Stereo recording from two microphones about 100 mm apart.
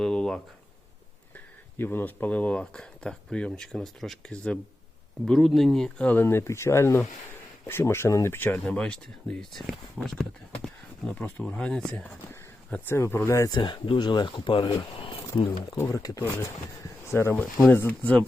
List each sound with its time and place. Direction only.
0.0 s a sound: 5° left (ahead or behind)
1.8 s speech: 20° left (ahead or behind); by 6.1 s 5° left (ahead or behind)
6.1 s speech: 20° left (ahead or behind)
8.6 s speech: 10° left (ahead or behind)
11.4 s speech: 5° left (ahead or behind)
12.7 s speech: 20° left (ahead or behind)
13.5 s speech: 50° left (ahead or behind)
15.8 s speech: 35° left (ahead or behind); by 18.2 s 15° left (ahead or behind)